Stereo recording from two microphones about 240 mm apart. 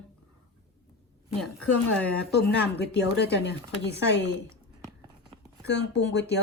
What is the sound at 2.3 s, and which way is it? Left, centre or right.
Speech, left.